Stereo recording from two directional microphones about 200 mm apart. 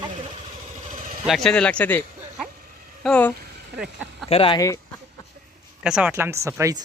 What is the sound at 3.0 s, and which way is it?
Speech, 5° left (ahead or behind).